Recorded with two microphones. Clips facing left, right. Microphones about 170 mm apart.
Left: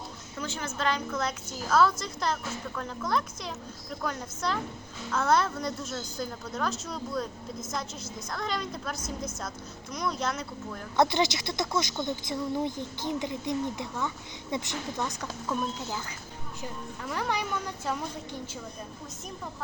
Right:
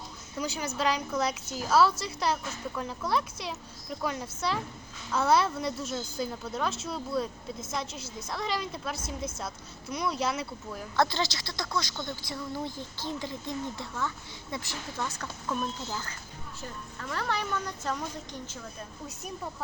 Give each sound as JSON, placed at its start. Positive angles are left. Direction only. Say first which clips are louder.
{"t": 0.3, "sound": "a woman's voice", "louder": "right 2 dB", "side_deg": -10}
{"t": 8.3, "sound": "a woman's voice", "louder": "right 1 dB", "side_deg": -5}
{"t": 9.0, "sound": "a woman's voice", "louder": "even", "side_deg": -30}
{"t": 9.9, "sound": "a woman's voice", "louder": "right 1 dB", "side_deg": -10}
{"t": 10.9, "sound": "a woman's voice", "louder": "left 3 dB", "side_deg": 20}